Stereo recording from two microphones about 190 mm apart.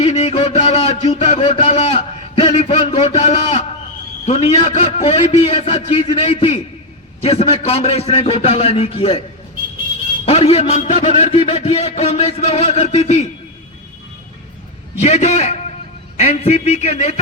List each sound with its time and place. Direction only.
0.0 s a sound: 35° left (ahead or behind)
4.3 s a man's voice: 30° left (ahead or behind)
10.2 s a man's voice: 30° left (ahead or behind)
15.0 s a man's voice: 35° left (ahead or behind)